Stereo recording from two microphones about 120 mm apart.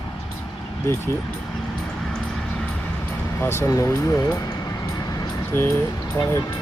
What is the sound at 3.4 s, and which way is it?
Speech, 20° left (ahead or behind).